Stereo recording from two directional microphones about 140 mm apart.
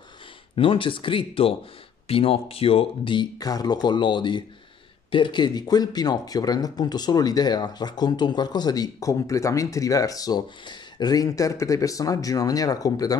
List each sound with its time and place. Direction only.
0.6 s speech: 40° left (ahead or behind)